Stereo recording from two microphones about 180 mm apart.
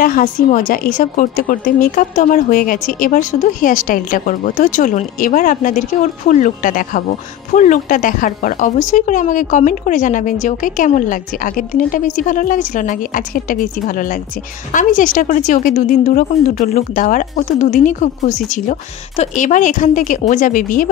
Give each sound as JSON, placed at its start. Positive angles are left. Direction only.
{"t": 0.0, "sound": "a woman's voice", "side_deg": 45}